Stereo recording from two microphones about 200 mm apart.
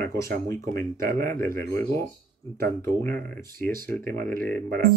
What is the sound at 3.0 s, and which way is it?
Speech, 5° left (ahead or behind).